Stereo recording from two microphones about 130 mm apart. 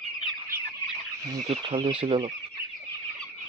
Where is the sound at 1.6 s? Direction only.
45° right (ahead or behind).